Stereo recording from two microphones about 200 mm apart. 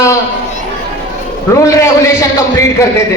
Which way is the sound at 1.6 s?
15° left (ahead or behind).